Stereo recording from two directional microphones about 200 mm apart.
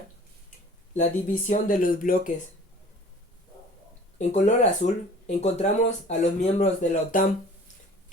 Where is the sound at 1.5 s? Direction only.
40° left (ahead or behind).